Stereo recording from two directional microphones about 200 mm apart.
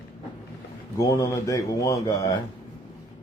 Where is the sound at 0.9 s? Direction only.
15° left (ahead or behind).